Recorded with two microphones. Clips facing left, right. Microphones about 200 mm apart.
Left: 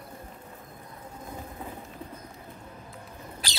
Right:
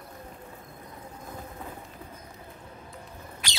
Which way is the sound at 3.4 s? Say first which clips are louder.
Left 1 dB; 35° left (ahead or behind).